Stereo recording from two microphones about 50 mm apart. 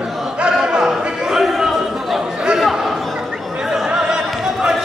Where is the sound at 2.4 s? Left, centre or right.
Centre.